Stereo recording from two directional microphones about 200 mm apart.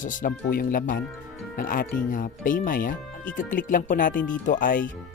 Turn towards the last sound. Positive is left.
turn(degrees=45)  # may be behind; listen again after turning